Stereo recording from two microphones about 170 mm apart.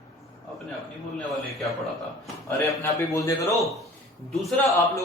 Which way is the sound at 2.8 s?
20° left (ahead or behind).